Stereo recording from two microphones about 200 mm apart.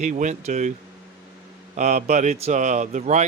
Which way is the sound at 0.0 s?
35° right (ahead or behind).